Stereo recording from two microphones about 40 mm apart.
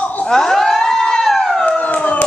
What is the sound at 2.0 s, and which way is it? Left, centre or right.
Crowd, left.